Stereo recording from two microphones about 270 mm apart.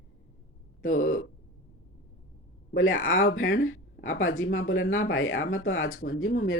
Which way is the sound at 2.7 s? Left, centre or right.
Left.